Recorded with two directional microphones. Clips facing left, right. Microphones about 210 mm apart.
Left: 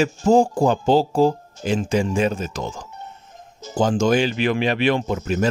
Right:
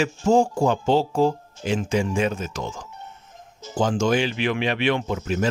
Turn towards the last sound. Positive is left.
turn(degrees=40)  # may be behind; listen again after turning